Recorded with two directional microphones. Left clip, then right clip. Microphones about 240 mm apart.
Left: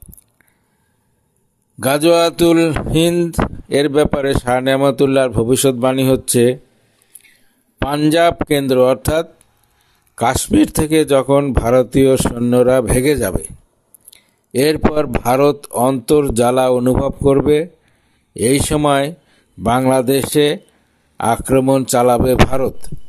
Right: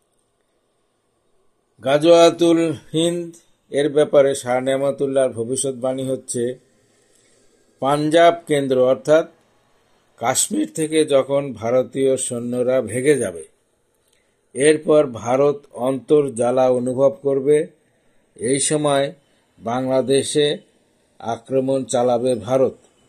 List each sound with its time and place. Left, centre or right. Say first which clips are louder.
1.8 s speech: even; left
7.9 s speech: left 1 dB; left